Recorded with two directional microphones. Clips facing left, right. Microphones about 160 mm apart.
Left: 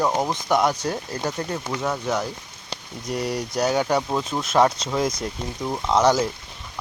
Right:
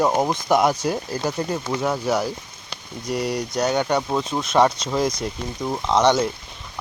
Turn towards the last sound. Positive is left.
turn(degrees=5)  # may be behind; listen again after turning